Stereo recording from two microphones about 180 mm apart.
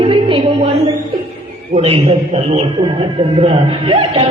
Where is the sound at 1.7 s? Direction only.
30° right (ahead or behind).